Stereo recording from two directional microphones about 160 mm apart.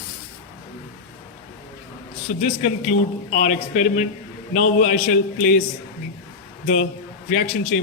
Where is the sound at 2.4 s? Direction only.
45° left (ahead or behind).